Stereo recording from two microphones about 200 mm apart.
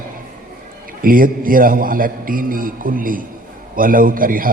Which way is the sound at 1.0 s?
45° right (ahead or behind).